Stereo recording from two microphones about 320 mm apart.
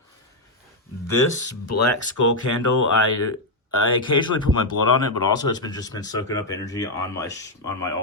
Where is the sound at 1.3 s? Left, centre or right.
Left.